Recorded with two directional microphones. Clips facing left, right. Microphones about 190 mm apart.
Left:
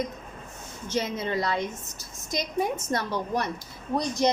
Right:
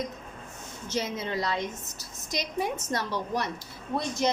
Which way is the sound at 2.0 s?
50° left (ahead or behind).